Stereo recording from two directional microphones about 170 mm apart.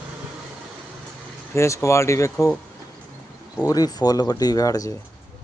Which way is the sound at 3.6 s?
20° left (ahead or behind).